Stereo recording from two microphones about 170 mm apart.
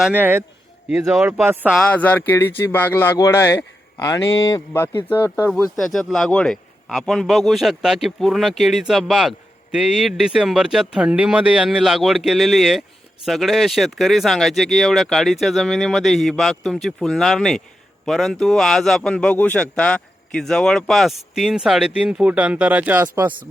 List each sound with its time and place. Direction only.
0.0 s a man's voice: 10° right (ahead or behind)
1.7 s a man's voice: 5° left (ahead or behind)
5.7 s a man's voice: centre (ahead or behind)